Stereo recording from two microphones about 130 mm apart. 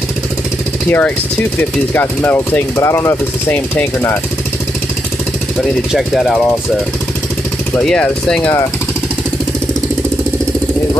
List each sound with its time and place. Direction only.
0.8 s speech: 15° left (ahead or behind)
5.9 s speech: centre (ahead or behind)
7.8 s speech: 5° left (ahead or behind)